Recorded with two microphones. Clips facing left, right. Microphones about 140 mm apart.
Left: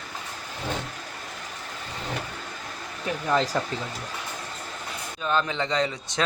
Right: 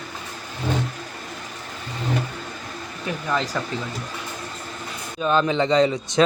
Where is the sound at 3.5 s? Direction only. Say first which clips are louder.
Even; 30° left (ahead or behind).